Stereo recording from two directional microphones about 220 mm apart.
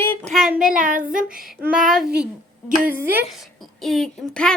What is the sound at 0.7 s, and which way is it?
Speech, 35° right (ahead or behind).